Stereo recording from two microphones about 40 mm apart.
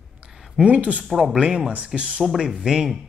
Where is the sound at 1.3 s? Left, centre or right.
Right.